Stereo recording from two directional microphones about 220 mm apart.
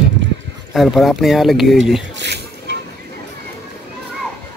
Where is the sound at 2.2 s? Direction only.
50° right (ahead or behind).